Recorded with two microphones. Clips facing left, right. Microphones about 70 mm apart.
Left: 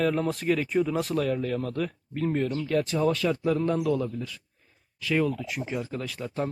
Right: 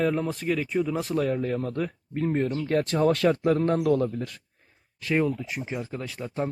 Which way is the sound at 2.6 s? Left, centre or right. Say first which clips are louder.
Right 1 dB; right.